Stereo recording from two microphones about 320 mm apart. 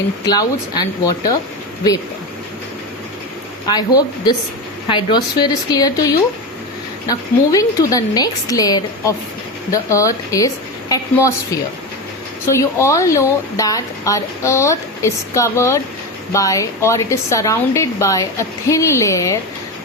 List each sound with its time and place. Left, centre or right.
0.3 s speech: centre
3.7 s speech: centre
12.5 s speech: centre